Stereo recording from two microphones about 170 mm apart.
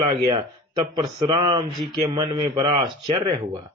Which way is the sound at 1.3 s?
25° right (ahead or behind).